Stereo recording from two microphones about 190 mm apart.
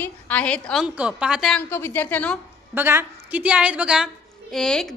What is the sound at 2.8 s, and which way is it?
A woman's voice, 10° right (ahead or behind).